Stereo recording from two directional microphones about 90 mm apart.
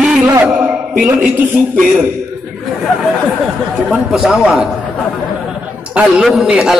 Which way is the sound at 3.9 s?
10° right (ahead or behind).